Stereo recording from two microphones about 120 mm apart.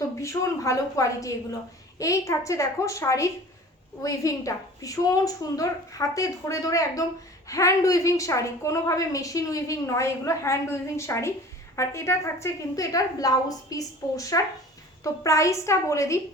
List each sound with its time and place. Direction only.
0.2 s speech: 25° left (ahead or behind)